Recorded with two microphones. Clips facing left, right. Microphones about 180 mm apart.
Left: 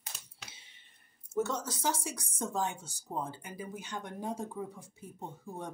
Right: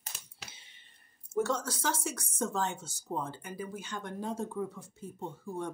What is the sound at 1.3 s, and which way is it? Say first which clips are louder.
Speech: right 2 dB; 20° left (ahead or behind).